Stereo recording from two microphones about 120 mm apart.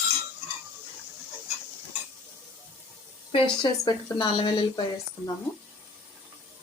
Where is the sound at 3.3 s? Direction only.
50° left (ahead or behind).